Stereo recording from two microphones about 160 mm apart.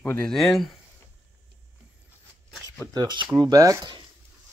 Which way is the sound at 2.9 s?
30° right (ahead or behind).